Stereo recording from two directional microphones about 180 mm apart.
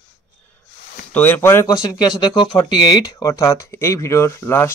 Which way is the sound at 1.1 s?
10° left (ahead or behind).